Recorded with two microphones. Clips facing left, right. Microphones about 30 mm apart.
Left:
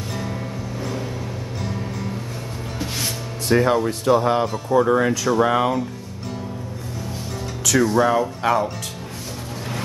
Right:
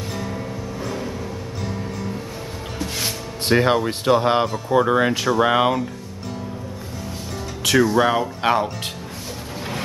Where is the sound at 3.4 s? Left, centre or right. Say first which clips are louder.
Even; right.